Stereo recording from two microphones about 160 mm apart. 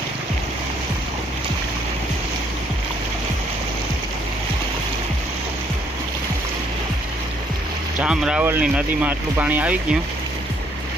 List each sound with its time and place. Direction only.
8.0 s speech: 5° right (ahead or behind)